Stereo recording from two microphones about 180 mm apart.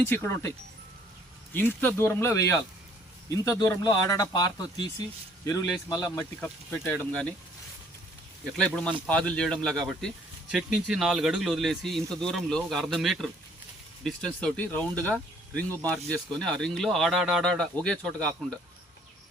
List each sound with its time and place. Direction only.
0.1 s speech: 10° left (ahead or behind)
1.5 s speech: 10° left (ahead or behind)
5.9 s speech: 15° left (ahead or behind)
8.5 s speech: 5° left (ahead or behind)